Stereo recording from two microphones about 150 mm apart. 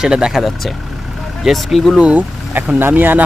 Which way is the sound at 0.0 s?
5° right (ahead or behind).